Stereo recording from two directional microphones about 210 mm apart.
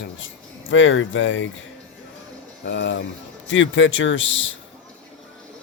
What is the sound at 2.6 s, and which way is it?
Speech, 60° left (ahead or behind).